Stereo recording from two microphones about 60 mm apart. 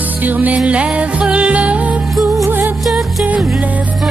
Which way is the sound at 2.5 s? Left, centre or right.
Right.